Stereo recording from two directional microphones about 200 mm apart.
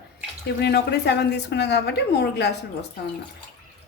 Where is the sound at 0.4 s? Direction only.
55° left (ahead or behind).